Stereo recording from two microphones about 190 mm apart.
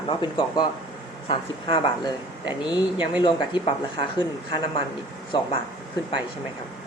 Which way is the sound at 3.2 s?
25° left (ahead or behind).